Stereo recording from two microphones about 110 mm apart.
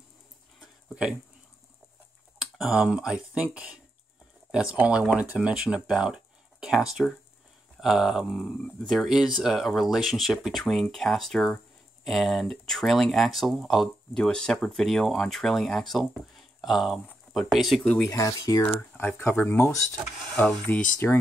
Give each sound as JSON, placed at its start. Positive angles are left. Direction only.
{"t": 0.6, "sound": "a sound", "side_deg": -10}
{"t": 2.3, "sound": "speech", "side_deg": -5}
{"t": 18.1, "sound": "speech", "side_deg": 30}
{"t": 18.7, "sound": "speech", "side_deg": 20}